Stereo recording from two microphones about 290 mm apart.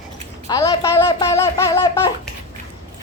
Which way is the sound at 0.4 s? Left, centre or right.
Centre.